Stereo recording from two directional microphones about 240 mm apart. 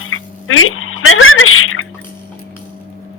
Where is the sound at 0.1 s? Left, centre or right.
Left.